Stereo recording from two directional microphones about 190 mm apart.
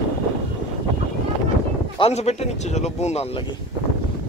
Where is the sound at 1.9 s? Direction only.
35° left (ahead or behind).